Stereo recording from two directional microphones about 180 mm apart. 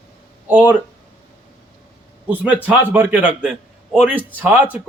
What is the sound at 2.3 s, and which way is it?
A man's voice, 10° right (ahead or behind).